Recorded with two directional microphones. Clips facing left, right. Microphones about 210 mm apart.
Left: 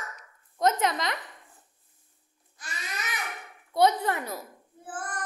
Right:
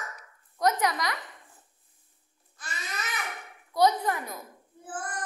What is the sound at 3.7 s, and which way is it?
Speech, 25° left (ahead or behind).